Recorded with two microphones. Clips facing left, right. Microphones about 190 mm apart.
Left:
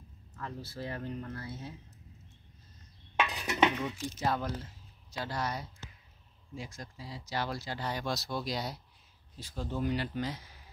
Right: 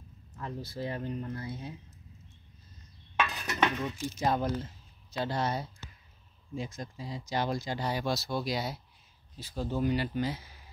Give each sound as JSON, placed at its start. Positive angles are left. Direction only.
{"t": 0.4, "sound": "speech", "side_deg": -15}
{"t": 3.2, "sound": "a sound", "side_deg": 15}
{"t": 4.2, "sound": "speech", "side_deg": -20}